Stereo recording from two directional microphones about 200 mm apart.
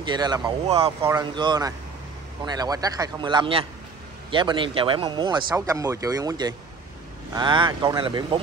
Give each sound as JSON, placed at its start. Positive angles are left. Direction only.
{"t": 0.0, "sound": "speech", "side_deg": -20}